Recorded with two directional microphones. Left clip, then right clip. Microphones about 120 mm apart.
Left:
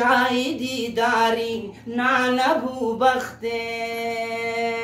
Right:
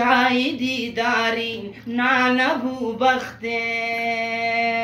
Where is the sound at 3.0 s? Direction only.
45° left (ahead or behind).